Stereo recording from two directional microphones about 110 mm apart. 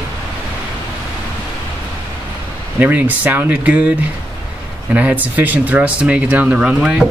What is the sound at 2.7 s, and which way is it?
Speech, 15° right (ahead or behind).